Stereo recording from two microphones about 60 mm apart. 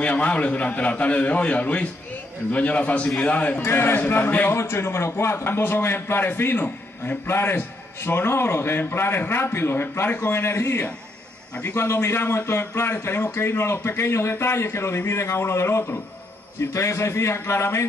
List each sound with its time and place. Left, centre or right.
0.0 s a man's voice: left
3.6 s a man's voice: left
4.5 s a man's voice: left